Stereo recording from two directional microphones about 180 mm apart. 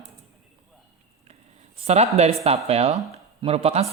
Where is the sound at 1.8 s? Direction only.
35° right (ahead or behind).